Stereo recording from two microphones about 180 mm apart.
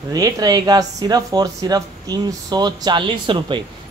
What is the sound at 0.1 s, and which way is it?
A woman's voice, 20° right (ahead or behind).